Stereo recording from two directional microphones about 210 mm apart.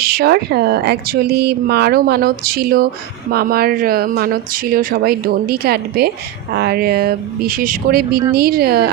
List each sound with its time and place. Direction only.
0.0 s speech: 45° right (ahead or behind)